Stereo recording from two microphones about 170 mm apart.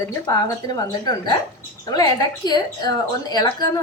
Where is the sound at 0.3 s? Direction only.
20° left (ahead or behind).